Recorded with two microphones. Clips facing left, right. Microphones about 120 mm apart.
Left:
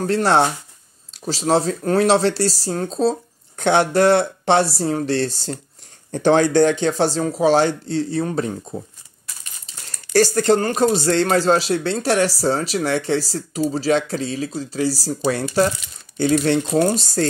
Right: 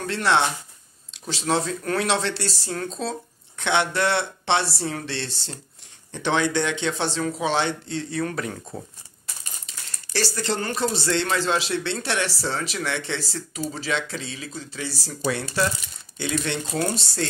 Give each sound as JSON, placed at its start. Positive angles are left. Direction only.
{"t": 0.0, "sound": "speech", "side_deg": 40}
{"t": 8.3, "sound": "speech", "side_deg": 25}
{"t": 9.8, "sound": "speech", "side_deg": 45}